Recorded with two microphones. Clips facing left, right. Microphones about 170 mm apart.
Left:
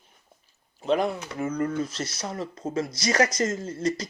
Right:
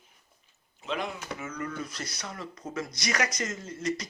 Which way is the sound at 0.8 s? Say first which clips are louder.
Left 9 dB; 40° left (ahead or behind).